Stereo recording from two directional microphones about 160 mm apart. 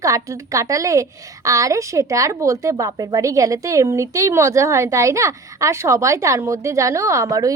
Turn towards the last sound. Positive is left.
turn(degrees=-20)  # may be behind; listen again after turning